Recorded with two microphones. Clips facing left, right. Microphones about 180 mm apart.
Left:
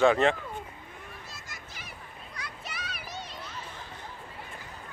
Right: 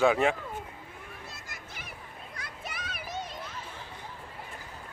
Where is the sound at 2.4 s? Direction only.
50° right (ahead or behind).